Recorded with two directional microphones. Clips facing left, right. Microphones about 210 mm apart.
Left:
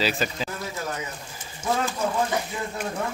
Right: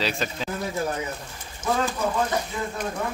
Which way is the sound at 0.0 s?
5° left (ahead or behind).